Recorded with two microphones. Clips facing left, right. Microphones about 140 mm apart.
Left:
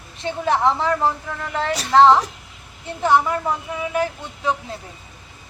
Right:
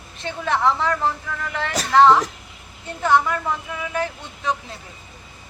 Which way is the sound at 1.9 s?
25° left (ahead or behind).